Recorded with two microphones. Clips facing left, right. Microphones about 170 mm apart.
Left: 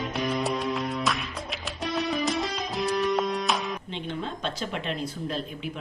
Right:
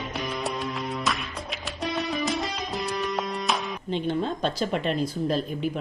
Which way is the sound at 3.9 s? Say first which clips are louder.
Right 7 dB; 40° right (ahead or behind).